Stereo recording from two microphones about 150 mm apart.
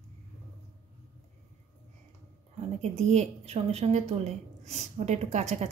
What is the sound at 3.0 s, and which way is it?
A woman's voice, 45° right (ahead or behind).